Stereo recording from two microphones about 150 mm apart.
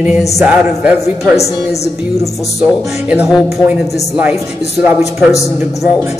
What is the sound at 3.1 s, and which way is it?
Music, 10° right (ahead or behind).